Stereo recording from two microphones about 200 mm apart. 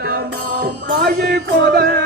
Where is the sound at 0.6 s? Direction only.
55° right (ahead or behind).